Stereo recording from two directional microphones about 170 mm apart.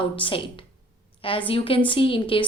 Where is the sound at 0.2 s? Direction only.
30° left (ahead or behind).